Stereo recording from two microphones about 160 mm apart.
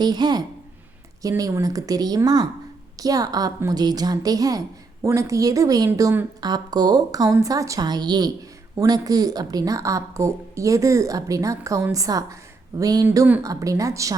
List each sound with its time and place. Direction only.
0.0 s a woman's voice: 25° right (ahead or behind)
13.1 s a woman's voice: 10° right (ahead or behind)